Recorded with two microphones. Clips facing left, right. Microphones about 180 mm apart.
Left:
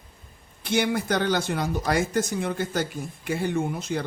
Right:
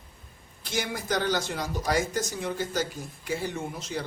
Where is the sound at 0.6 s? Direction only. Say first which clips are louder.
Left 7 dB; 60° left (ahead or behind).